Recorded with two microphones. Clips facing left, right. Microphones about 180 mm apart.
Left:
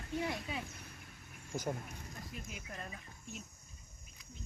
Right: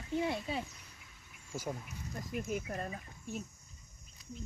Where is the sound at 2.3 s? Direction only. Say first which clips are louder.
Right 14 dB; 50° right (ahead or behind).